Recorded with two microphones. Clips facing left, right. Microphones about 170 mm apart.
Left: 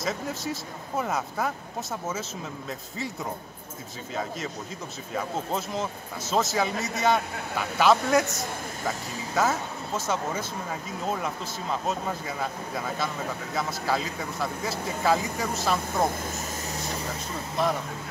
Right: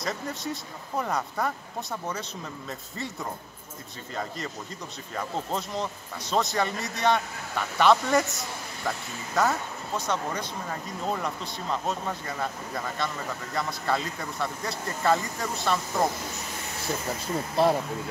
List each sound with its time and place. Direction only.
0.0 s speech: centre (ahead or behind)
4.1 s speech: 5° left (ahead or behind)
17.6 s speech: 30° right (ahead or behind)